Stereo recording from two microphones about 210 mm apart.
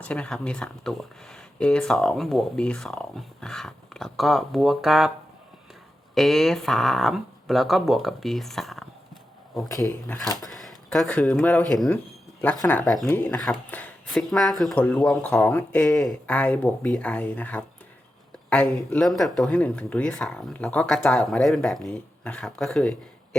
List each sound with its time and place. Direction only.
0.0 s speech: 5° left (ahead or behind)
6.1 s speech: centre (ahead or behind)
10.1 s speech: 20° left (ahead or behind)
10.5 s speech: centre (ahead or behind)
18.9 s speech: centre (ahead or behind)